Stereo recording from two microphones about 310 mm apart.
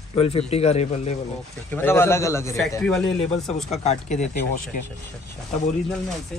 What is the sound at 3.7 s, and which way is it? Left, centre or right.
Speech, left.